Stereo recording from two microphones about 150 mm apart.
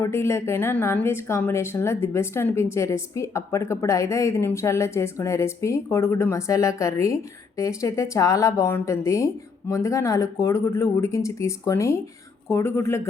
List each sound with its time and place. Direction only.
0.0 s a woman's voice: 15° left (ahead or behind)